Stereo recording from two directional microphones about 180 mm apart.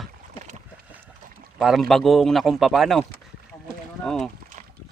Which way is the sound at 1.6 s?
Centre (ahead or behind).